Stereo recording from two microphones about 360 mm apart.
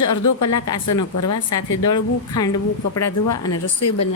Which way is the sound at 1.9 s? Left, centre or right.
Centre.